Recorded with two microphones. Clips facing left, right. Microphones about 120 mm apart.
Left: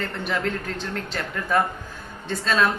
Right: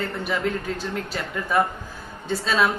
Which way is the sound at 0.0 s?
10° right (ahead or behind).